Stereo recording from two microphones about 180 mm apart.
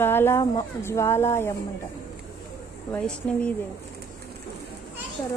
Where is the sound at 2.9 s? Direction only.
5° left (ahead or behind).